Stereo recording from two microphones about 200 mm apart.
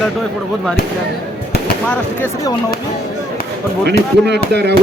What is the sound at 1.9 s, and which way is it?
Speech, 15° left (ahead or behind).